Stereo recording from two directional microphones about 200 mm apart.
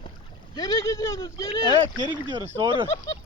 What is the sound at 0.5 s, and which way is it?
Speech, 20° left (ahead or behind).